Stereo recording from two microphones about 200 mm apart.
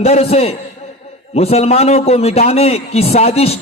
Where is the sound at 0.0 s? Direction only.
30° left (ahead or behind).